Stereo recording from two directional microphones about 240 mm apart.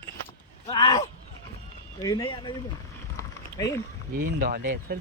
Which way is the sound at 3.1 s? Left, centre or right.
Centre.